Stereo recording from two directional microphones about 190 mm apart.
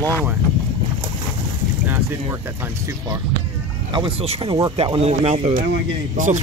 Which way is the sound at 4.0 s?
25° right (ahead or behind).